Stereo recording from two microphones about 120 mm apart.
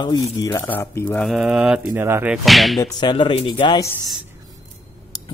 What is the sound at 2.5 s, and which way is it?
Whip, centre (ahead or behind).